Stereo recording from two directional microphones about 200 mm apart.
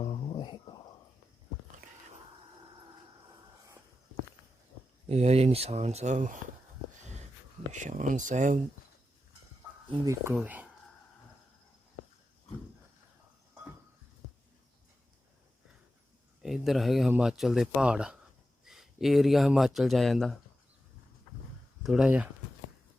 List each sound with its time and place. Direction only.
0.0 s a sound: 25° left (ahead or behind)
5.0 s speech: 30° right (ahead or behind)
7.7 s speech: 40° right (ahead or behind)
9.9 s speech: 15° right (ahead or behind)
16.4 s speech: centre (ahead or behind)
21.8 s speech: 5° right (ahead or behind)